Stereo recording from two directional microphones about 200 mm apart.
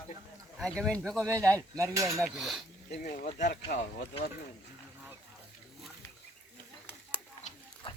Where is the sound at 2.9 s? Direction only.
45° left (ahead or behind).